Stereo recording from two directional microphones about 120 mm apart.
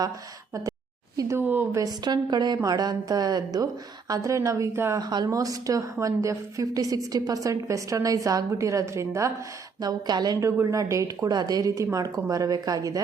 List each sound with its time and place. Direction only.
1.1 s speech: 30° right (ahead or behind)
1.4 s speech: 15° right (ahead or behind)
1.8 s a woman's voice: 35° right (ahead or behind)
4.9 s a woman's voice: 35° right (ahead or behind)
9.8 s a woman's voice: 35° right (ahead or behind)